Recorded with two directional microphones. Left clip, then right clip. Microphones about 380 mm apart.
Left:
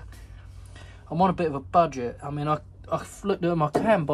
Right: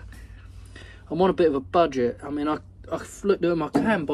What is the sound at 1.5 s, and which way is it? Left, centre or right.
Speech, left.